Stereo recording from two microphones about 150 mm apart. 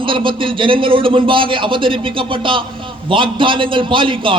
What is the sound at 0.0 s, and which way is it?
A man's voice, 35° right (ahead or behind).